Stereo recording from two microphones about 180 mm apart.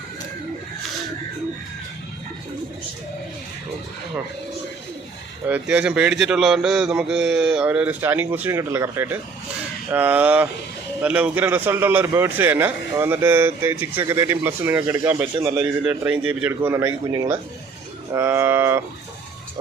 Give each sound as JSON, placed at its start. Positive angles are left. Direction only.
{"t": 5.5, "sound": "a man's voice", "side_deg": -10}